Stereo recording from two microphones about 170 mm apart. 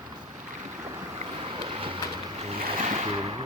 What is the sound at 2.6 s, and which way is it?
Waves, 45° right (ahead or behind).